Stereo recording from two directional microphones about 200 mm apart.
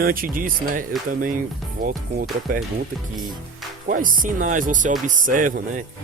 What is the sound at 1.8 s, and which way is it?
Speech, 45° right (ahead or behind).